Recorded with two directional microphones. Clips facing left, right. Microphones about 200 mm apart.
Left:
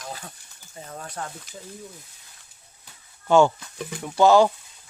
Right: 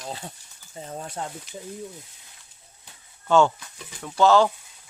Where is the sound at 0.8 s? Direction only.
25° right (ahead or behind).